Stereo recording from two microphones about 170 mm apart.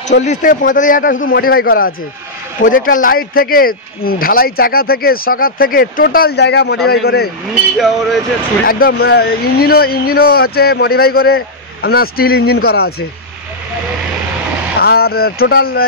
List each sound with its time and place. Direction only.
0.2 s a man's voice: 50° left (ahead or behind); by 6.8 s 80° left
6.9 s speech: 70° left (ahead or behind)
7.7 s speech: centre (ahead or behind)
8.6 s speech: 60° left (ahead or behind)
14.8 s speech: 65° left (ahead or behind)